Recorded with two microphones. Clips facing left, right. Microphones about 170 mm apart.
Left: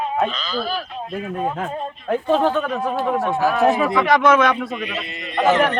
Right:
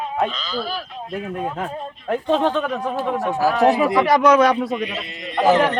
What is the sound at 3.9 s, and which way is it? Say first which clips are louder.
Speech: right 1 dB; 35° right (ahead or behind).